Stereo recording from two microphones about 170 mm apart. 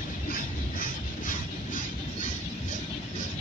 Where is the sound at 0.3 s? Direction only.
55° left (ahead or behind).